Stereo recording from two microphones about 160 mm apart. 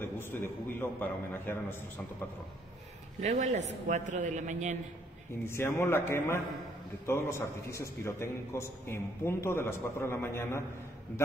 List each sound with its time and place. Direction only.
0.0 s a man's voice: 15° left (ahead or behind)
3.2 s a man's voice: 50° right (ahead or behind)
5.4 s a man's voice: 15° left (ahead or behind)